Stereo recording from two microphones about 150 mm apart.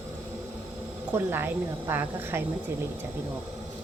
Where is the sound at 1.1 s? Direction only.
15° right (ahead or behind).